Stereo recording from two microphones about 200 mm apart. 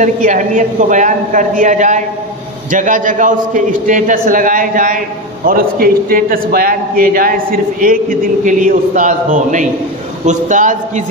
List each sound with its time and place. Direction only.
0.0 s a man's voice: 40° right (ahead or behind)